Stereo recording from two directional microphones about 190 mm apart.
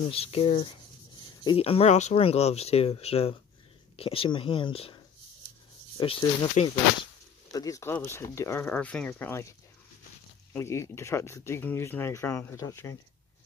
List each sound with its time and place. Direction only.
0.0 s speech: 30° left (ahead or behind)
5.9 s speech: 25° left (ahead or behind)
7.5 s speech: 20° left (ahead or behind)
10.5 s speech: 15° left (ahead or behind)